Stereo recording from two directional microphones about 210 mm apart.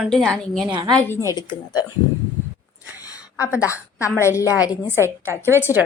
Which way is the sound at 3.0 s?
15° left (ahead or behind).